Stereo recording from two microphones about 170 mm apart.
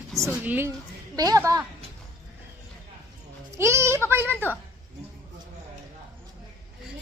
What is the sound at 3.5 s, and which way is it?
Speech, 15° right (ahead or behind).